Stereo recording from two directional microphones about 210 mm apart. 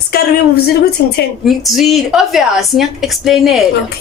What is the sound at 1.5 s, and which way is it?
A woman's voice, centre (ahead or behind).